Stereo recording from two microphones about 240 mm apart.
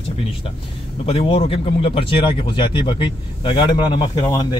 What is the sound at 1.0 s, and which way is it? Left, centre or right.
Speech, left.